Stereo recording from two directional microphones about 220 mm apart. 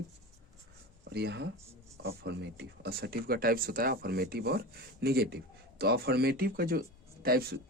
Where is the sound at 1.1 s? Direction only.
50° right (ahead or behind).